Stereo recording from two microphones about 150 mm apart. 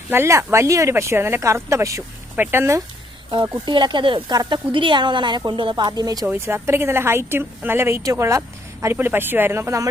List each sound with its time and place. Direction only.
0.1 s a woman's voice: 15° right (ahead or behind)
3.3 s a woman's voice: 30° right (ahead or behind)